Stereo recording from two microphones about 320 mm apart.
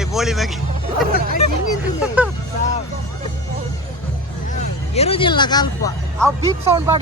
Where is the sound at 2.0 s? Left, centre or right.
Centre.